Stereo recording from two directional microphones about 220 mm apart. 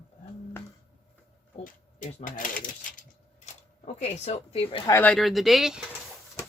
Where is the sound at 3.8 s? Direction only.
30° left (ahead or behind).